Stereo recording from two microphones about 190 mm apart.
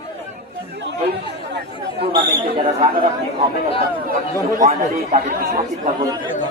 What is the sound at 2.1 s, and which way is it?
Speech, 25° right (ahead or behind).